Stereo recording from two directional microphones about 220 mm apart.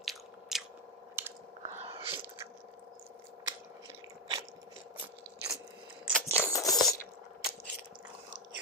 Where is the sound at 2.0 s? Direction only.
25° right (ahead or behind).